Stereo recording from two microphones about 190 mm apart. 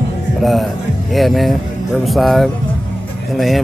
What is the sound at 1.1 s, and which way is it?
Speech, centre (ahead or behind).